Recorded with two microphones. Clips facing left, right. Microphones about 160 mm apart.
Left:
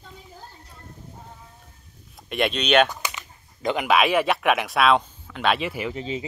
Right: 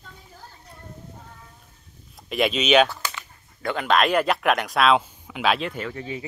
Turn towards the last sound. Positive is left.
turn(degrees=20)  # may be behind; listen again after turning